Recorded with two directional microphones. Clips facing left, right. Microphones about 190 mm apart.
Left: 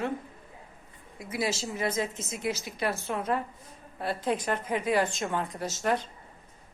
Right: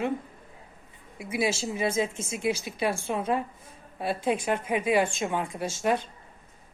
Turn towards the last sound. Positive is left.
turn(degrees=-15)  # may be behind; listen again after turning